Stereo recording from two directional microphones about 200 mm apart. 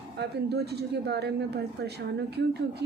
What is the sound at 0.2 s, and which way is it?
Speech, 55° right (ahead or behind).